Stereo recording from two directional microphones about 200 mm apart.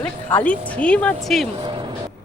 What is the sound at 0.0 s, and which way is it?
Speech, 10° left (ahead or behind).